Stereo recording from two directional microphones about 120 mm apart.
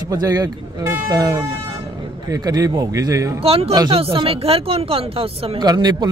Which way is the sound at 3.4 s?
50° right (ahead or behind).